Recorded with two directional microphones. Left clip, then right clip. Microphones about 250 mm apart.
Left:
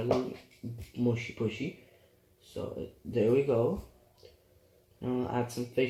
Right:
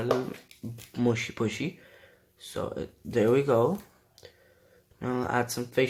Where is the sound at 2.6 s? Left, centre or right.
Right.